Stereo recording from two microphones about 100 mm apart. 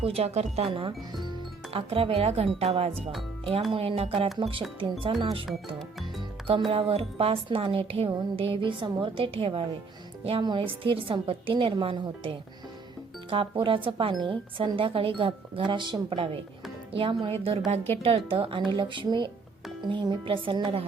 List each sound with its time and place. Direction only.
0.0 s speech: 85° right
0.9 s speech: 45° right (ahead or behind)
1.7 s a woman's voice: 75° right (ahead or behind)
4.4 s speech: 60° right (ahead or behind)
6.7 s a woman's voice: 75° right (ahead or behind)
10.4 s speech: 55° right (ahead or behind)
17.2 s a woman's voice: 75° right (ahead or behind)